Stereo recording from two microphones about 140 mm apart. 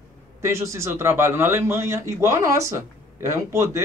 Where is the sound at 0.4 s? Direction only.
20° right (ahead or behind).